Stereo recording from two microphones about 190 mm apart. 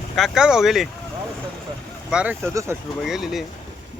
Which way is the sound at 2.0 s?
5° right (ahead or behind).